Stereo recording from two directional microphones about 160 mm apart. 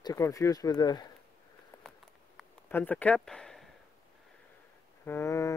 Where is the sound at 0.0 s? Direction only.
20° left (ahead or behind).